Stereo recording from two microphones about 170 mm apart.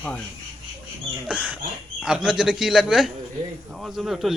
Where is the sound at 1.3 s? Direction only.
5° right (ahead or behind).